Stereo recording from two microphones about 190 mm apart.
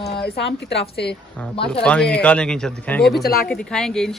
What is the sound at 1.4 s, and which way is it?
A woman's voice, 5° left (ahead or behind).